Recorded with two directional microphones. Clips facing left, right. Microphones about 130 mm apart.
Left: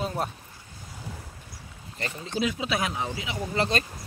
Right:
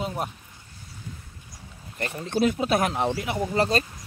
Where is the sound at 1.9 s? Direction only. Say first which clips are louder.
Right 4 dB; 55° right (ahead or behind).